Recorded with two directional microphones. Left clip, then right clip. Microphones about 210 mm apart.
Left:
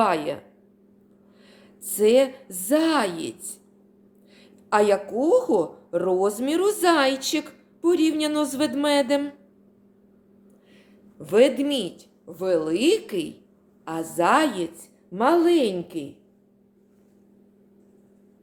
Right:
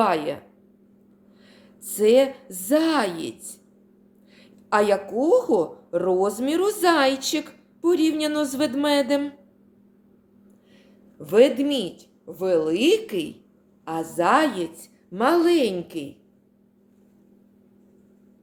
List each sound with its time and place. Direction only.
0.0 s a woman's voice: centre (ahead or behind)
1.5 s a woman's voice: centre (ahead or behind)
11.2 s a woman's voice: centre (ahead or behind)